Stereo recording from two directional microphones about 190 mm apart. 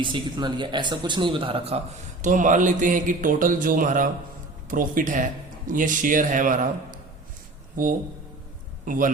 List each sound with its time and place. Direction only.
0.0 s speech: 25° right (ahead or behind)
2.2 s a man's voice: 40° right (ahead or behind)